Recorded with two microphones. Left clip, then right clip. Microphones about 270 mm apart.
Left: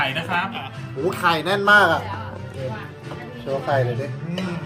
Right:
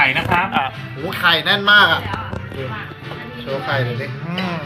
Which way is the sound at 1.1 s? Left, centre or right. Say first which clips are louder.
Right 5 dB; left.